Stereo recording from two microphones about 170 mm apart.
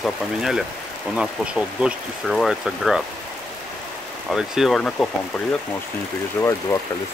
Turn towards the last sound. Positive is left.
turn(degrees=15)  # may be behind; listen again after turning